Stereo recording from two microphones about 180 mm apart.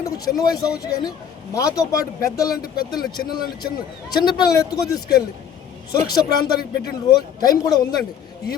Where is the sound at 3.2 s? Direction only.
55° left (ahead or behind).